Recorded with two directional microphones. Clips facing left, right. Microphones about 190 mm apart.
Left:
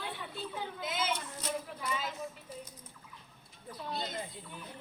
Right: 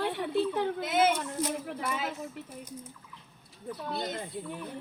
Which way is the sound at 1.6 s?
65° right (ahead or behind).